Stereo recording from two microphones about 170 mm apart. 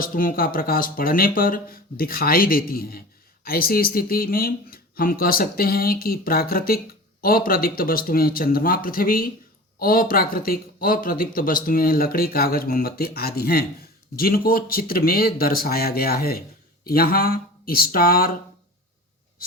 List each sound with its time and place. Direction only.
0.0 s speech: 55° left (ahead or behind)